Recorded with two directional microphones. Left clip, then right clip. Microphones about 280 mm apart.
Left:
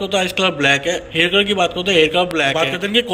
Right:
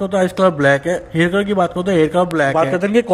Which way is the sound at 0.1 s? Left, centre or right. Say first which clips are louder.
Right 3 dB; right.